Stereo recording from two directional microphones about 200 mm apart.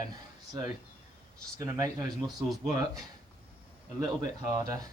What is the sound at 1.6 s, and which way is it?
Speech, 15° right (ahead or behind).